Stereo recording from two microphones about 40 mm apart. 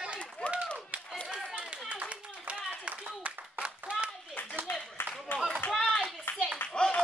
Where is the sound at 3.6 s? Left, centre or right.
Right.